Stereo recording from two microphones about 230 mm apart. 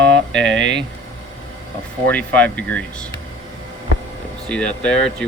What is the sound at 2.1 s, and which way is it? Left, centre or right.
Speech, centre.